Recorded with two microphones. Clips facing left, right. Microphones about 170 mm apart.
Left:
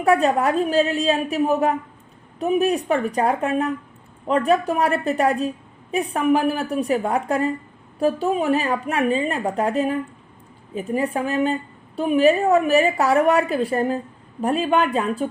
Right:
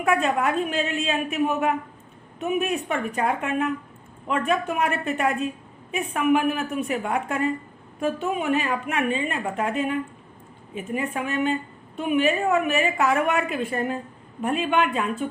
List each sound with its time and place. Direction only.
0.0 s a woman's voice: 35° left (ahead or behind)